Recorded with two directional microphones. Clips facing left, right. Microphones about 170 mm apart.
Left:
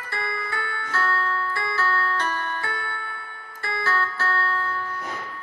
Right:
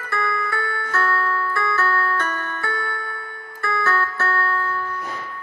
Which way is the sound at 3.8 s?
25° left (ahead or behind).